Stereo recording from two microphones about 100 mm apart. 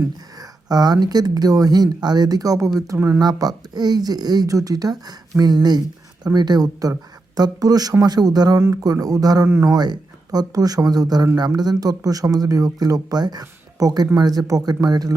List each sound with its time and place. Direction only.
0.3 s speech: 40° right (ahead or behind)